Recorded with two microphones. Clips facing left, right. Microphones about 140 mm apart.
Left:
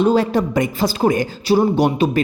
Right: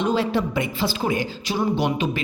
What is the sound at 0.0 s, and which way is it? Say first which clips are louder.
A woman's voice: left 6 dB; 45° left (ahead or behind).